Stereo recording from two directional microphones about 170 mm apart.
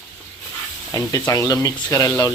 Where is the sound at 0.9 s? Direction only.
20° left (ahead or behind).